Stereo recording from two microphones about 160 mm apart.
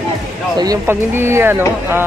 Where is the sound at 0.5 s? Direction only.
20° right (ahead or behind).